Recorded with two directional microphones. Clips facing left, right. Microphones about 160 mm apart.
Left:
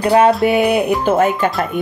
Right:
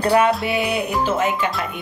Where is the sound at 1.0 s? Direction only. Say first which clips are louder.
Left 6 dB; 55° left (ahead or behind).